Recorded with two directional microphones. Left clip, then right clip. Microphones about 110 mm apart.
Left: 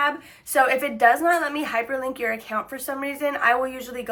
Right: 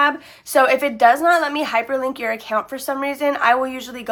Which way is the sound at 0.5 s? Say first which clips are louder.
Right 5 dB; 40° right (ahead or behind).